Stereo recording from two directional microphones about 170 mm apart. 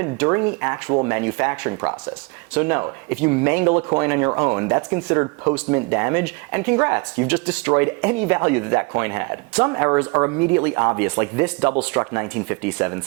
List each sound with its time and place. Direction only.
0.0 s speech: 15° right (ahead or behind)